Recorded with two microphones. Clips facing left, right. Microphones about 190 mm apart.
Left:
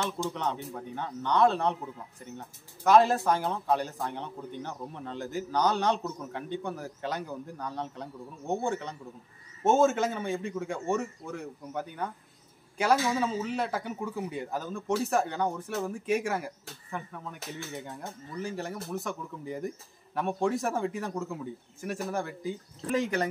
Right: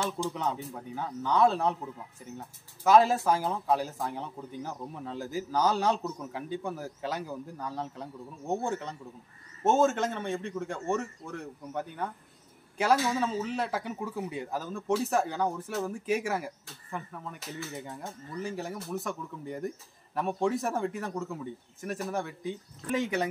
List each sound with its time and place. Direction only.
0.3 s a man's voice: 5° right (ahead or behind)